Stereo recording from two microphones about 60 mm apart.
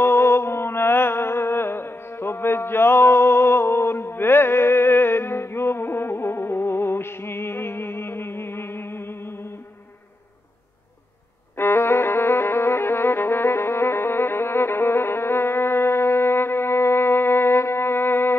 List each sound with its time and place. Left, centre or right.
0.0 s music: left
11.5 s music: left